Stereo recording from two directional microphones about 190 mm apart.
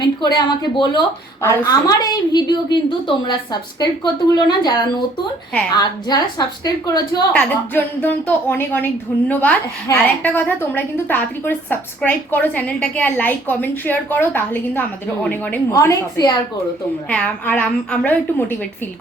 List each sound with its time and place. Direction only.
0.3 s a woman's voice: 25° left (ahead or behind)
7.3 s a woman's voice: 10° left (ahead or behind)
17.1 s a woman's voice: 5° left (ahead or behind)